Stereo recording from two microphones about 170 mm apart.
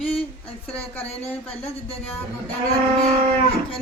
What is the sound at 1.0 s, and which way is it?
Speech, 35° left (ahead or behind).